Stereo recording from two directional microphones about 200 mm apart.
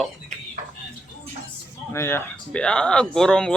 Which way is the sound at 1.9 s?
10° left (ahead or behind).